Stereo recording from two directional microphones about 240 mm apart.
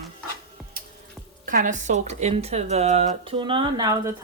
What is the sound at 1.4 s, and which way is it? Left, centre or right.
Speech, right.